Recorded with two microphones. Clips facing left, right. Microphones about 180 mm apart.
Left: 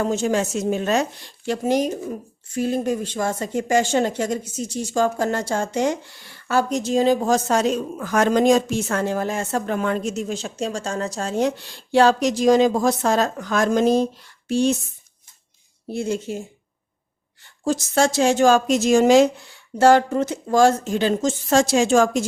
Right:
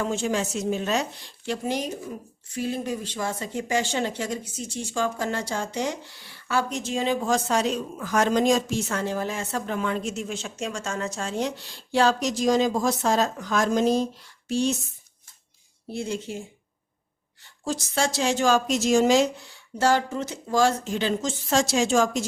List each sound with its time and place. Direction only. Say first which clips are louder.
0.0 s a woman's voice: left 5 dB; 40° left (ahead or behind)
15.9 s a woman's voice: left 5 dB; 45° left (ahead or behind)
17.7 s a woman's voice: left 7 dB; 45° left (ahead or behind)